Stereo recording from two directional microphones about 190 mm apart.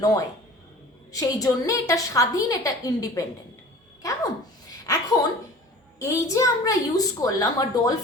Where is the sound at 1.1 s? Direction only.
20° left (ahead or behind).